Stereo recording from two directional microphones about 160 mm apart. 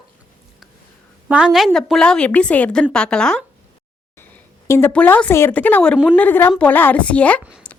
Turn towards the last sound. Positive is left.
turn(degrees=10)  # may be behind; listen again after turning